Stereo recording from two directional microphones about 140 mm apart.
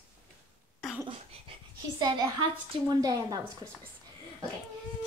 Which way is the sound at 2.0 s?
30° right (ahead or behind).